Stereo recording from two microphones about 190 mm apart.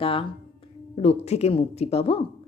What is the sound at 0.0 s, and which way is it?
Speech, 30° left (ahead or behind).